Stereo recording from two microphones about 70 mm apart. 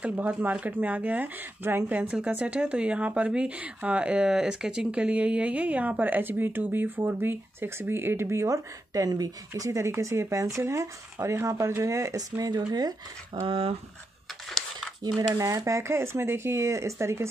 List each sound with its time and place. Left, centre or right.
0.0 s speech: centre; by 9.3 s right
9.5 s speech: right
15.1 s speech: right